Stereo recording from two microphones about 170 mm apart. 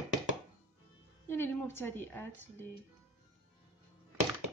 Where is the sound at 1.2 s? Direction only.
15° left (ahead or behind).